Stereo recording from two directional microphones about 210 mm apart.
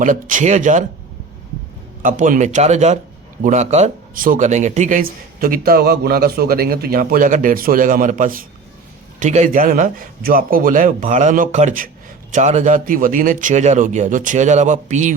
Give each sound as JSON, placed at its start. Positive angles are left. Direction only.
{"t": 0.0, "sound": "speech", "side_deg": -40}
{"t": 2.0, "sound": "speech", "side_deg": -40}